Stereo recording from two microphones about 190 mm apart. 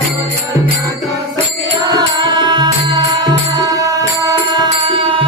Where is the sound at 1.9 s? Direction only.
20° right (ahead or behind).